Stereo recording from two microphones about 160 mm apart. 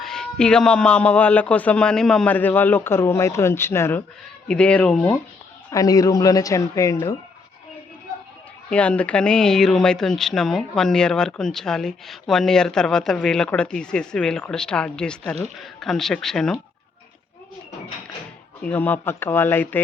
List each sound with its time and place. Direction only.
0.0 s a man's voice: 5° left (ahead or behind)
5.7 s a man's voice: 20° left (ahead or behind)
8.7 s speech: 10° left (ahead or behind)
18.6 s a man's voice: 10° left (ahead or behind)